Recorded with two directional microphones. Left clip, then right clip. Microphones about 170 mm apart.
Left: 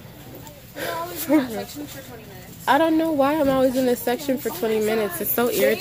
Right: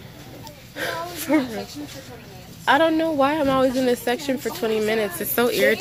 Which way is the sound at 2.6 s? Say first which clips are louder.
Right 1 dB; 10° left (ahead or behind).